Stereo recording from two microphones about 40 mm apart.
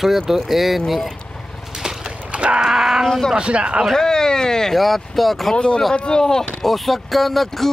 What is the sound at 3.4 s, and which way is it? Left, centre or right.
Speech, right.